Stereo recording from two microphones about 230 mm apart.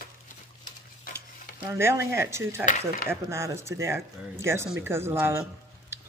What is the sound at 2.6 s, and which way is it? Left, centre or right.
Speech, left.